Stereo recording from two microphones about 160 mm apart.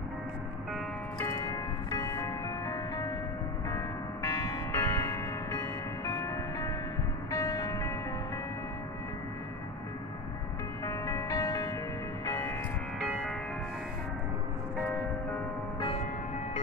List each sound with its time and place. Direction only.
1.2 s music: 20° left (ahead or behind)
10.9 s music: 20° left (ahead or behind)
12.3 s church bell: 15° left (ahead or behind)
13.0 s music: centre (ahead or behind)